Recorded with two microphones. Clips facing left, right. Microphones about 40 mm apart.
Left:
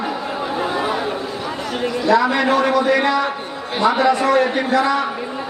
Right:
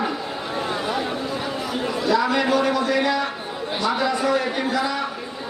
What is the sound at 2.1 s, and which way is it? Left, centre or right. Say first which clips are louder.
A man's voice: left 4 dB; left.